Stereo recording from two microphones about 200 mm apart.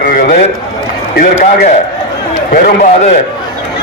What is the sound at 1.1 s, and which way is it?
Speech, 40° left (ahead or behind).